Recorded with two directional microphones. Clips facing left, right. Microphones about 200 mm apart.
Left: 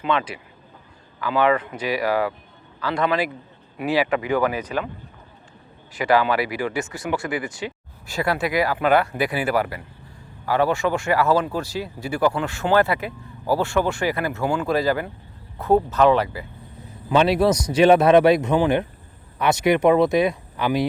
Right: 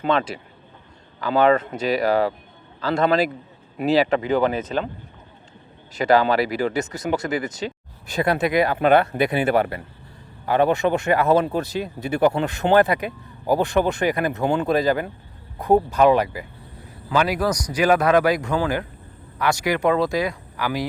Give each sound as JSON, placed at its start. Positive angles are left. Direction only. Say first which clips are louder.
{"t": 0.0, "sound": "speech", "louder": "right 2 dB", "side_deg": -35}
{"t": 1.7, "sound": "speech", "louder": "right 3 dB", "side_deg": -25}
{"t": 2.8, "sound": "a man's voice", "louder": "right 3 dB", "side_deg": -45}
{"t": 6.0, "sound": "speech", "louder": "right 2 dB", "side_deg": -40}
{"t": 8.0, "sound": "speech", "louder": "right 2 dB", "side_deg": -20}
{"t": 17.1, "sound": "a man's voice", "louder": "left 4 dB", "side_deg": 25}